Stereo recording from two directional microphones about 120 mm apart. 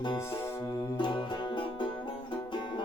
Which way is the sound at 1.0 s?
40° left (ahead or behind).